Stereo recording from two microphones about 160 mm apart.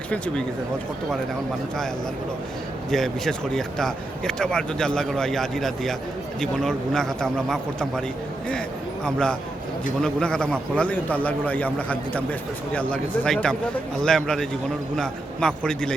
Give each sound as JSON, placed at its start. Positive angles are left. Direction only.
{"t": 2.9, "sound": "speech", "side_deg": 5}
{"t": 9.0, "sound": "a man's voice", "side_deg": 5}